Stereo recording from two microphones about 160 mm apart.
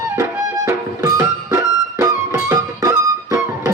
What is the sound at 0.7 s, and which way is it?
Music, 20° right (ahead or behind).